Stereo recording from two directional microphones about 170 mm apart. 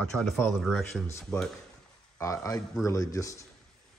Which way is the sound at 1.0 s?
15° left (ahead or behind).